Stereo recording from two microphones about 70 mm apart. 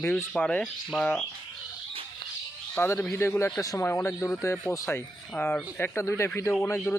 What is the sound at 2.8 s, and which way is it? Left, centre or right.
Speech, left.